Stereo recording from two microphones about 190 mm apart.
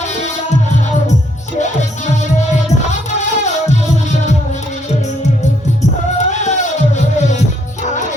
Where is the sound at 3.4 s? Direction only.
35° left (ahead or behind).